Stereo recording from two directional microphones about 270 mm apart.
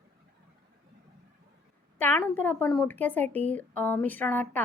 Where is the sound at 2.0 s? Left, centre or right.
Centre.